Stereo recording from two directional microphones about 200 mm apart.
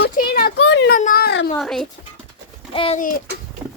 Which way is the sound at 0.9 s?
45° left (ahead or behind).